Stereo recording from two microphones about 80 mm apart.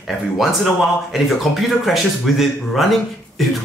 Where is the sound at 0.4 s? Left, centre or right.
Centre.